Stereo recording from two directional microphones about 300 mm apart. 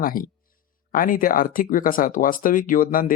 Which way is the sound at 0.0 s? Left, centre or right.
Left.